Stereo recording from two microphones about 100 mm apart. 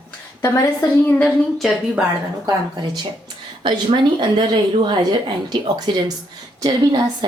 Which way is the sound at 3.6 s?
50° right (ahead or behind).